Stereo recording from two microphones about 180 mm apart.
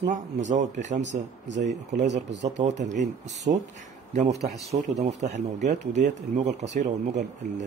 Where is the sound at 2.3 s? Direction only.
75° right (ahead or behind).